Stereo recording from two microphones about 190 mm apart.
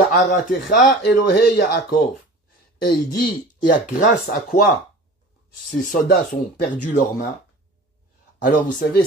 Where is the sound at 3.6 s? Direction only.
45° left (ahead or behind).